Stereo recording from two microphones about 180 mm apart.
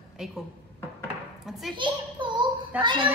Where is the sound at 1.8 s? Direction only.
25° right (ahead or behind).